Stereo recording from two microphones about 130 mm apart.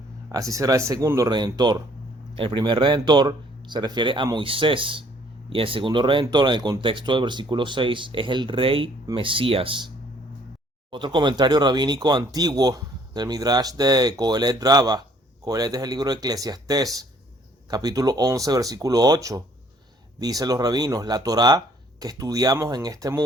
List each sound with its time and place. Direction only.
0.3 s speech: 25° right (ahead or behind)
2.3 s speech: 45° right (ahead or behind)
10.9 s speech: 35° right (ahead or behind)